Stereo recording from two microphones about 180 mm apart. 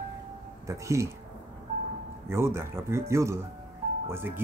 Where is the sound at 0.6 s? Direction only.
15° right (ahead or behind).